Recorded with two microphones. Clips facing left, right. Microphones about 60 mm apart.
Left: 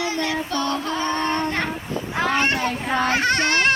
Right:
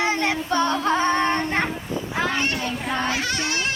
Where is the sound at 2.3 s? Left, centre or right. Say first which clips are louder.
Left 4 dB; left.